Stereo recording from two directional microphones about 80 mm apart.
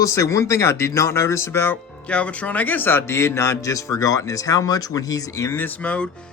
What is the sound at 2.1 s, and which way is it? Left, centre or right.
Speech, centre.